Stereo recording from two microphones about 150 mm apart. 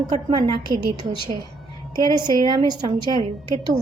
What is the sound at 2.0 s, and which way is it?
A woman's voice, 30° right (ahead or behind).